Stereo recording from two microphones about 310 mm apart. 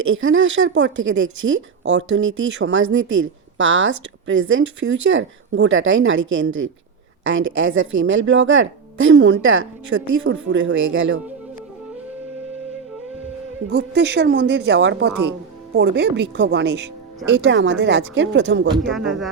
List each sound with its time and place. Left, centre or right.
0.1 s speech: right
13.7 s speech: right
15.1 s speech: right
15.7 s speech: right
18.9 s speech: centre